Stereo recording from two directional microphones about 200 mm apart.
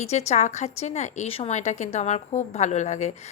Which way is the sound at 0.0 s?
35° left (ahead or behind).